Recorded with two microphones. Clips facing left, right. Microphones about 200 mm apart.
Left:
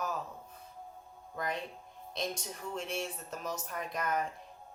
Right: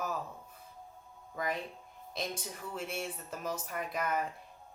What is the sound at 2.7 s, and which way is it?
A woman's voice, 5° right (ahead or behind).